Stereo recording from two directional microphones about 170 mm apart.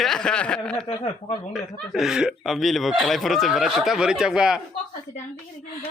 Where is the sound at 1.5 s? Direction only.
Centre (ahead or behind).